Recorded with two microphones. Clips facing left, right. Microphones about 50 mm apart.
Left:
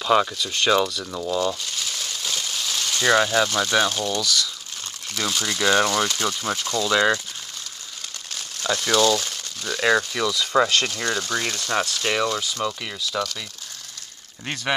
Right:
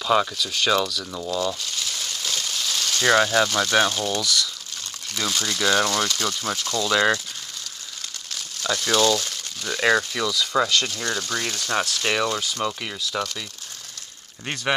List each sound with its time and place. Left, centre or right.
0.0 s speech: centre
2.0 s a sound: centre
3.0 s speech: centre
6.7 s speech: centre
8.9 s speech: centre
10.3 s speech: centre
10.7 s speech: left
11.0 s speech: centre
11.6 s speech: centre
14.4 s speech: centre